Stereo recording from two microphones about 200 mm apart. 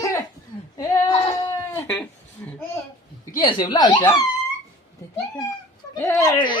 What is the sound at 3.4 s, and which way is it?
Speech, 25° left (ahead or behind).